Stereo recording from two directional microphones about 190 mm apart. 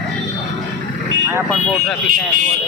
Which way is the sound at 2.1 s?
50° right (ahead or behind).